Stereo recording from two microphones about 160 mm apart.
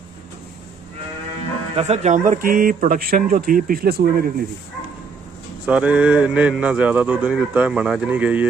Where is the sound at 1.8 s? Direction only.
45° right (ahead or behind); by 4.4 s 65° right (ahead or behind).